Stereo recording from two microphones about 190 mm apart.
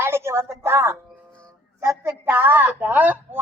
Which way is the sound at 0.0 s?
15° right (ahead or behind).